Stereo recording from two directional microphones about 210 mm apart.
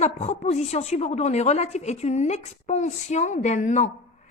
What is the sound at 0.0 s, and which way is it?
A woman's voice, 30° left (ahead or behind).